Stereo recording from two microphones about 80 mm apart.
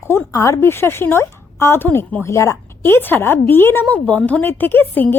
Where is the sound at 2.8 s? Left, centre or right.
Left.